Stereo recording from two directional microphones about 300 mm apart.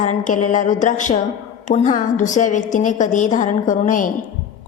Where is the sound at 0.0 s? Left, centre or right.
Left.